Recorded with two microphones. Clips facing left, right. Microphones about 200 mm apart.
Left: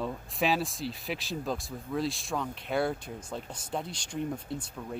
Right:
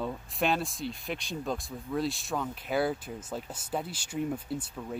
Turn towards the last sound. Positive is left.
turn(degrees=-5)  # may be behind; listen again after turning